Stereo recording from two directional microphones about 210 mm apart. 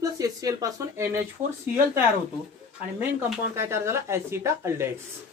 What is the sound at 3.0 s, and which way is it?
A woman's voice, 10° right (ahead or behind).